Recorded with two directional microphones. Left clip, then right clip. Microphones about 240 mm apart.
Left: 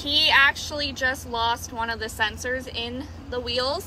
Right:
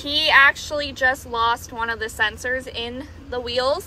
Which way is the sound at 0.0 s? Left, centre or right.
Centre.